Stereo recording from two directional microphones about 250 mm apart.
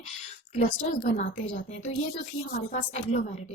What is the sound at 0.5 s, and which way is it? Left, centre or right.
A woman's voice, left.